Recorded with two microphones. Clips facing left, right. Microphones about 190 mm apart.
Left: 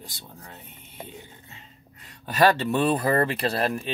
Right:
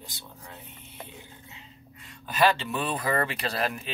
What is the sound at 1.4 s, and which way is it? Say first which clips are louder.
Music: right 1 dB; 50° left (ahead or behind).